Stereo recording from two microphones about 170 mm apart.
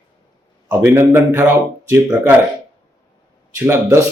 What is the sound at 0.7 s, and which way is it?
Speech, 15° right (ahead or behind).